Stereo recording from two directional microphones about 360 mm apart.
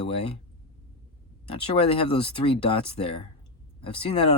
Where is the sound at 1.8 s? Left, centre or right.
Centre.